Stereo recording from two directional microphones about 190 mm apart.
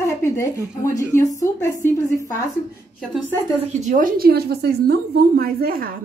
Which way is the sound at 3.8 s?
45° right (ahead or behind).